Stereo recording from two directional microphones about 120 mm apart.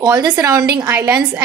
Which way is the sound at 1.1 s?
10° right (ahead or behind).